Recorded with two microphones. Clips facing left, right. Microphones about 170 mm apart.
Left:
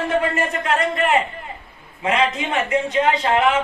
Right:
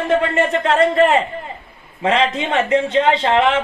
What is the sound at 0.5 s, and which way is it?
A man's voice, 30° right (ahead or behind).